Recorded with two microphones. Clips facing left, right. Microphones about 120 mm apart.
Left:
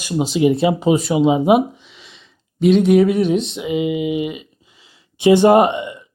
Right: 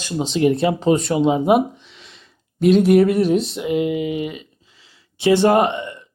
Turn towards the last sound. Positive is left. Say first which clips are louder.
# left 4 dB
turn(degrees=15)  # may be behind; listen again after turning